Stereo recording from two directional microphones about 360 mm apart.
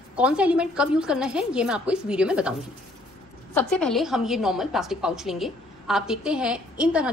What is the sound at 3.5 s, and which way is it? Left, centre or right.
A woman's voice, centre.